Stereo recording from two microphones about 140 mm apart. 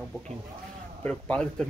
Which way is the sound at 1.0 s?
5° left (ahead or behind).